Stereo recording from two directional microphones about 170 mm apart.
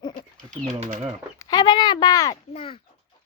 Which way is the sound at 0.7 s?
45° right (ahead or behind).